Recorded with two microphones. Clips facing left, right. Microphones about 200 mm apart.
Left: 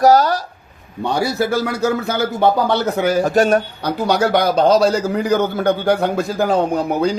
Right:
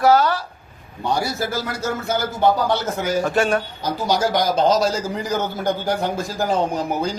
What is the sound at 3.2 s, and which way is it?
Speech, 40° left (ahead or behind).